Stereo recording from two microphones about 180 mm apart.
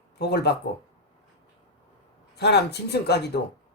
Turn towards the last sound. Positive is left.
turn(degrees=65)  # may be behind; listen again after turning